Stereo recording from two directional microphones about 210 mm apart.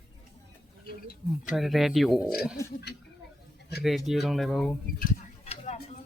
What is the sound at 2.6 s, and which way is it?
Speech, 15° left (ahead or behind).